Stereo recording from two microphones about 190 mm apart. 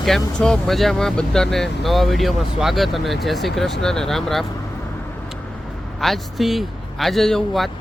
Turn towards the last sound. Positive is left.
turn(degrees=0)  # may be behind; listen again after turning